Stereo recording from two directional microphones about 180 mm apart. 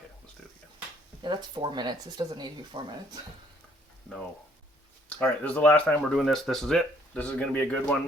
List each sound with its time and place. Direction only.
1.2 s speech: 25° right (ahead or behind)
5.0 s speech: 5° left (ahead or behind)